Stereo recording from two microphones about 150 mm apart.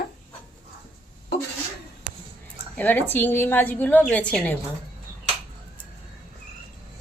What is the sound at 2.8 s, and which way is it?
A woman's voice, 15° left (ahead or behind).